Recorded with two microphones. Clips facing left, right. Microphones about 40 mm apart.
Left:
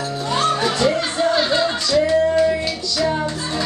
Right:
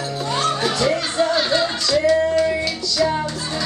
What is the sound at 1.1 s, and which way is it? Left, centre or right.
Music, centre.